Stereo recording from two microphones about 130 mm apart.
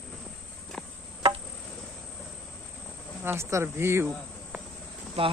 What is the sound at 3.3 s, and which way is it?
Speech, 20° right (ahead or behind).